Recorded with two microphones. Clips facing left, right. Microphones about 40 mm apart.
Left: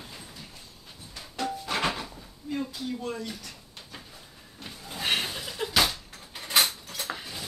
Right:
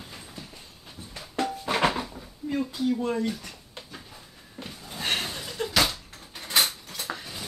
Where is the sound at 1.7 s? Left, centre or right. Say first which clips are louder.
Right 5 dB; right.